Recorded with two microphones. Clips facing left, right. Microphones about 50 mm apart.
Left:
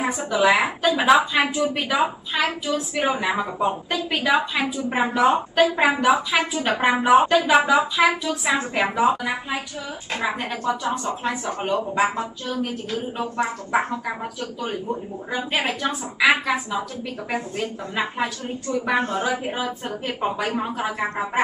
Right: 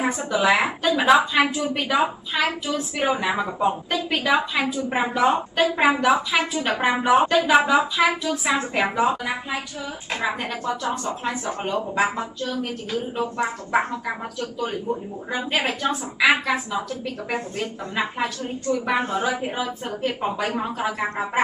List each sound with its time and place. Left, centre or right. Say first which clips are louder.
0.0 s a woman's voice: left 1 dB; centre
10.8 s speech: left 1 dB; centre
15.5 s a woman's voice: right 1 dB; centre
18.9 s a woman's voice: left 1 dB; centre
19.2 s a woman's voice: even; centre